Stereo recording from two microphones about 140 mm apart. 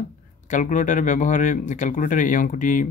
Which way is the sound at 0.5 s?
60° left (ahead or behind).